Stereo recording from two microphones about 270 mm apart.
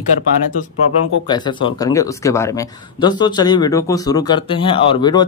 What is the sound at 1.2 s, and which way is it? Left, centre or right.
Speech, centre.